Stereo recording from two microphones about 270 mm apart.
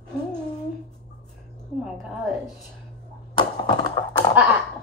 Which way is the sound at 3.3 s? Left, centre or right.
Centre.